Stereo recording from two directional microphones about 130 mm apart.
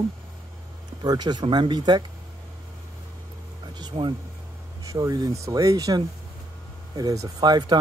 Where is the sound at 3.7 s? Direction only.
35° right (ahead or behind).